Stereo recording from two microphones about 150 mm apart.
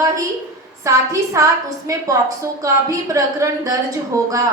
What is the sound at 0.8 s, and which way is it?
A woman's voice, 20° right (ahead or behind).